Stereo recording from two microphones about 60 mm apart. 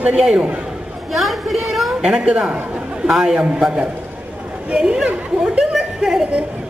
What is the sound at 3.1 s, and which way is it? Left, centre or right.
A man's voice, centre.